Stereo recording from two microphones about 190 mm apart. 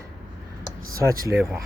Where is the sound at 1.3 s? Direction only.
5° right (ahead or behind).